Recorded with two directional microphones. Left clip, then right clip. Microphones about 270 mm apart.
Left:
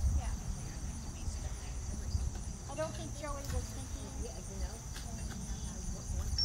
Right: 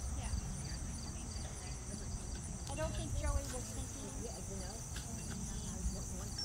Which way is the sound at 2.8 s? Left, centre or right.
Left.